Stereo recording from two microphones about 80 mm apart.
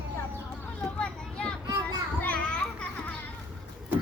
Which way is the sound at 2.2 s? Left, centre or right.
Centre.